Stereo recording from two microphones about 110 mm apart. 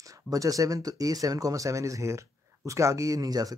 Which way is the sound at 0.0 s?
30° right (ahead or behind).